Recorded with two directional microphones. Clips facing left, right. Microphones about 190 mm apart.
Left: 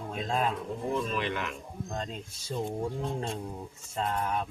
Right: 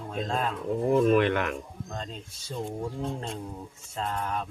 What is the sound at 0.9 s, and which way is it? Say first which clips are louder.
Speech: right 10 dB; 60° right (ahead or behind).